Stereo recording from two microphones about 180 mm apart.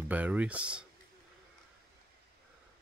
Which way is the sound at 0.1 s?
10° right (ahead or behind).